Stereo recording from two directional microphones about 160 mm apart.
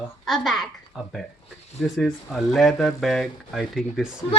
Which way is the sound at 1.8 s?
Centre (ahead or behind).